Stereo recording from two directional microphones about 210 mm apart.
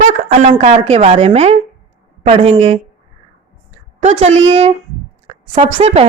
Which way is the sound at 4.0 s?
30° right (ahead or behind).